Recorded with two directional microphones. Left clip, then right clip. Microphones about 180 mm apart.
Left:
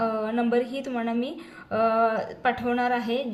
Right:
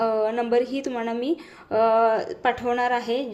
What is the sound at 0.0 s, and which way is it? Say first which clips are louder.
A woman's voice: right 4 dB; 45° right (ahead or behind).